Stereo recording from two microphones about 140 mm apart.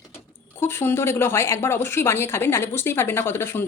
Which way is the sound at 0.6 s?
15° left (ahead or behind).